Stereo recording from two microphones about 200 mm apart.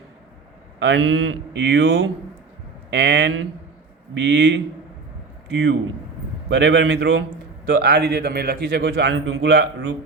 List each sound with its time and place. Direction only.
0.8 s a man's voice: 65° right (ahead or behind)
6.5 s speech: 60° right (ahead or behind)